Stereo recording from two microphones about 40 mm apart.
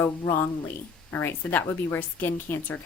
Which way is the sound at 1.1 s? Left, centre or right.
Left.